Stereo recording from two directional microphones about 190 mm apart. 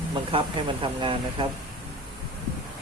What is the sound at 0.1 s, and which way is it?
Speech, 25° right (ahead or behind).